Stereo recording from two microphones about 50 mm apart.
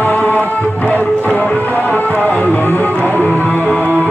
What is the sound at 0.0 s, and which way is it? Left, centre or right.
Music, left.